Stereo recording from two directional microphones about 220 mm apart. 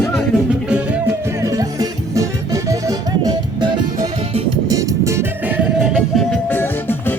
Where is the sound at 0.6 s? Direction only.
5° right (ahead or behind).